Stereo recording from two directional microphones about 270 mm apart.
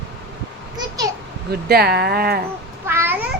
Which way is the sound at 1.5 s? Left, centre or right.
Right.